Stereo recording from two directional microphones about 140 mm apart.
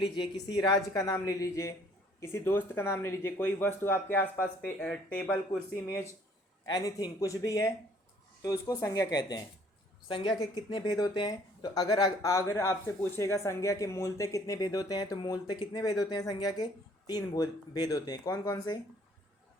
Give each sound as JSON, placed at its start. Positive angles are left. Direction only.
{"t": 0.0, "sound": "speech", "side_deg": 35}
{"t": 6.7, "sound": "speech", "side_deg": 30}